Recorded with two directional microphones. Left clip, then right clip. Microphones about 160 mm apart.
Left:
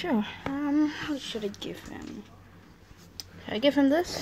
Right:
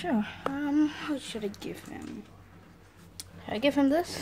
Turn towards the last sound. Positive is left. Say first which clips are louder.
# left 2 dB
turn(degrees=-10)  # may be behind; listen again after turning